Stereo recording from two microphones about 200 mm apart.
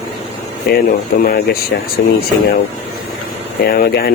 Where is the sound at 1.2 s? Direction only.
50° left (ahead or behind).